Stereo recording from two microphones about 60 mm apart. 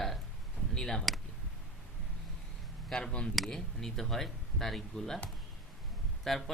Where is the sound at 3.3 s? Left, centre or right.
Centre.